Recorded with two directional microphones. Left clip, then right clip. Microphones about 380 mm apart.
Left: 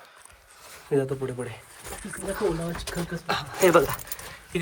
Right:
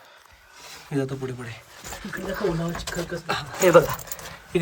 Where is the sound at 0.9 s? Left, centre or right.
Centre.